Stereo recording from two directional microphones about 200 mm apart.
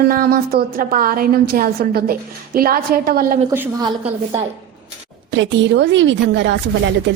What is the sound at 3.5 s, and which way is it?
Speech, 10° right (ahead or behind).